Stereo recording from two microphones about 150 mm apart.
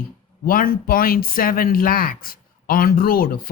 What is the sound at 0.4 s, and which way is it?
Speech, 75° left (ahead or behind).